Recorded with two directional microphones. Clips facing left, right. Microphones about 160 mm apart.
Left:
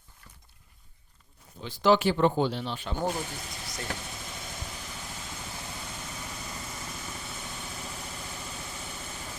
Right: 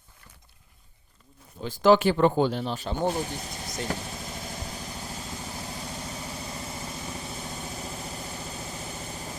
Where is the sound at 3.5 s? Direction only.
45° right (ahead or behind).